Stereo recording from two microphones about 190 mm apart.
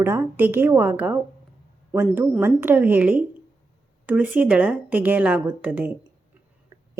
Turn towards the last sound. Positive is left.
turn(degrees=-10)  # may be behind; listen again after turning